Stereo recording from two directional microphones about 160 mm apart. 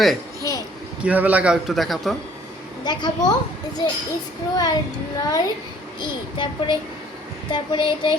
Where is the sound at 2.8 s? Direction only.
25° left (ahead or behind).